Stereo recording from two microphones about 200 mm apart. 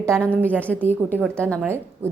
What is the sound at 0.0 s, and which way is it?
A woman's voice, 5° left (ahead or behind).